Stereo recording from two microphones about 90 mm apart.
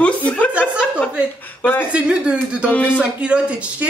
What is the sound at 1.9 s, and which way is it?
Speech, 10° right (ahead or behind).